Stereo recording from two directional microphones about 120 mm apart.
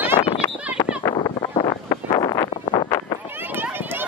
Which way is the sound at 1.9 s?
35° left (ahead or behind).